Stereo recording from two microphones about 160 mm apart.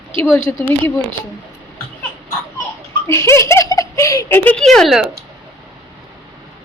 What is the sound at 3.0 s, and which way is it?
Speech, 15° left (ahead or behind).